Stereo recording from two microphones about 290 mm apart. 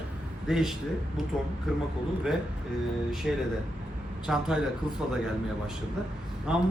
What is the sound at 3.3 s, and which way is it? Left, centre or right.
A man's voice, centre.